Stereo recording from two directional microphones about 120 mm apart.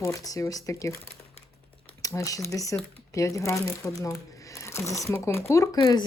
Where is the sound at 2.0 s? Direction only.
30° left (ahead or behind).